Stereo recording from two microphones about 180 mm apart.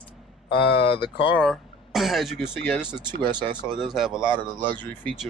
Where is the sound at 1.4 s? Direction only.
Centre (ahead or behind).